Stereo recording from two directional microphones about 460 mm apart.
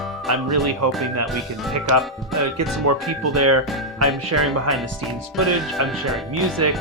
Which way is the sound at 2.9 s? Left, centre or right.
Right.